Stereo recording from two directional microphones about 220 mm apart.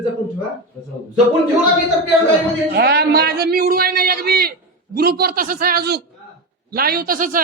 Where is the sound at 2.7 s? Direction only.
45° right (ahead or behind).